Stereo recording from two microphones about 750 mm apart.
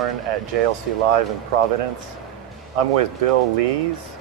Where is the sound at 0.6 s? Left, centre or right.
Right.